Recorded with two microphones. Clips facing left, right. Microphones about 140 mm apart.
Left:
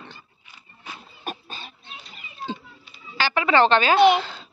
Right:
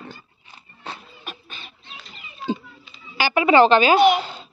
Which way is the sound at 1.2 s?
40° left (ahead or behind).